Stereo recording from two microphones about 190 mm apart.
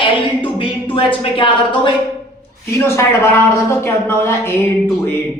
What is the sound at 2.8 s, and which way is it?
Speech, 15° left (ahead or behind).